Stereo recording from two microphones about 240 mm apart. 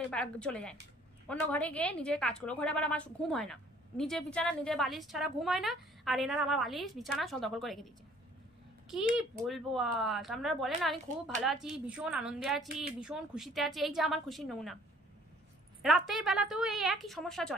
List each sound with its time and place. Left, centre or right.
0.1 s a woman's voice: centre
9.1 s a woman's voice: centre
15.8 s a woman's voice: centre